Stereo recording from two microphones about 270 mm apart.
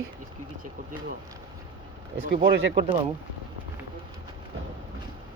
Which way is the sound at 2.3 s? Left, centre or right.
Right.